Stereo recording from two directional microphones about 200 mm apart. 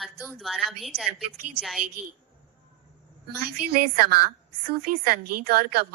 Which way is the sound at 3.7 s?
50° right (ahead or behind).